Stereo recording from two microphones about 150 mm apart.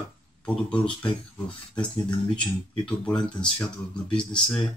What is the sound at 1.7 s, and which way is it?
Speech, 30° left (ahead or behind).